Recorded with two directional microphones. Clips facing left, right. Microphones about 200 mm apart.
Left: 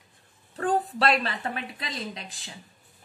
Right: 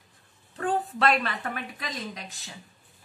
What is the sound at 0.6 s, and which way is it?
A woman's voice, 35° left (ahead or behind).